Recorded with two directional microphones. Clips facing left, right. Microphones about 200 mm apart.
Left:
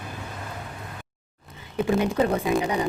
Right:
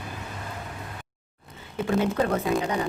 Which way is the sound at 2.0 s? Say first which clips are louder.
Left 2 dB; 15° left (ahead or behind).